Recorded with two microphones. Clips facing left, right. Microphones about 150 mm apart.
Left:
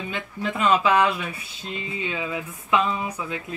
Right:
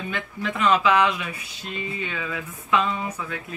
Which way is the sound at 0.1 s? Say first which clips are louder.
Left 1 dB; 30° left (ahead or behind).